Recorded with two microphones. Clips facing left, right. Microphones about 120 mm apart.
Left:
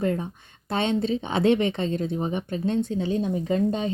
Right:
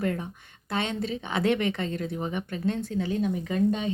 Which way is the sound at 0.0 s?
30° left (ahead or behind).